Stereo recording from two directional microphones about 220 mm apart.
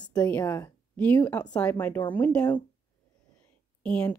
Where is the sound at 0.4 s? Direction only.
15° left (ahead or behind).